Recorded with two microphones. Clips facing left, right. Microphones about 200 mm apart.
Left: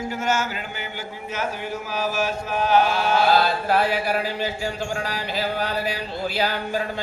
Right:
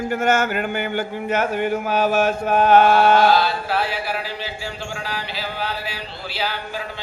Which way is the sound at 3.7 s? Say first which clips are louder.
Left 3 dB; 45° left (ahead or behind).